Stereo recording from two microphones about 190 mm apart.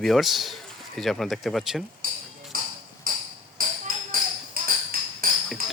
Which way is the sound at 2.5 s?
50° right (ahead or behind).